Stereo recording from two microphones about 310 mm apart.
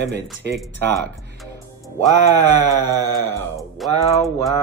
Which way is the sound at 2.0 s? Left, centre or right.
Centre.